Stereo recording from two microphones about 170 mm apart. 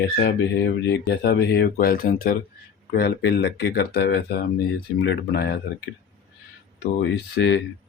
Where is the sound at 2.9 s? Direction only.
75° left (ahead or behind).